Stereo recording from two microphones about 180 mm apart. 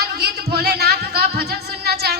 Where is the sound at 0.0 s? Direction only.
55° right (ahead or behind).